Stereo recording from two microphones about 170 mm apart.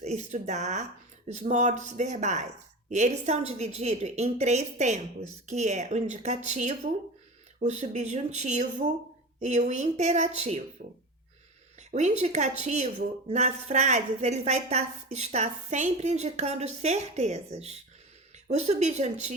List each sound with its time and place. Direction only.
0.0 s a woman's voice: 40° right (ahead or behind)
10.8 s speech: 55° right (ahead or behind)
11.8 s a woman's voice: 45° right (ahead or behind)